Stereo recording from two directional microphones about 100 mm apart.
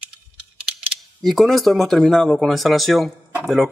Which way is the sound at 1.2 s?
Centre (ahead or behind).